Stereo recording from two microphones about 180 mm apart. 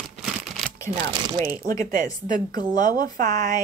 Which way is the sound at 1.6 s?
45° right (ahead or behind).